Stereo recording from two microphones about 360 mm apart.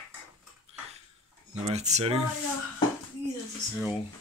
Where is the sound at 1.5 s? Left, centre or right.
Centre.